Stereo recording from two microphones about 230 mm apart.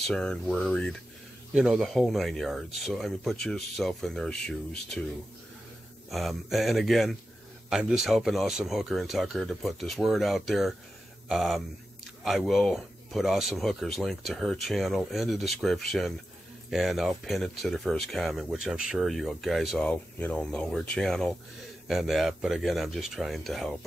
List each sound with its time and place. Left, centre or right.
0.0 s speech: centre
6.0 s speech: centre